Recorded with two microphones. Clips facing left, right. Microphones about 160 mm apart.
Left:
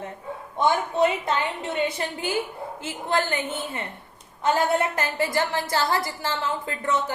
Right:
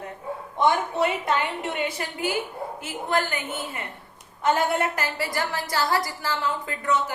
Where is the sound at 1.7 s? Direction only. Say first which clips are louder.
Left 3 dB; 30° left (ahead or behind).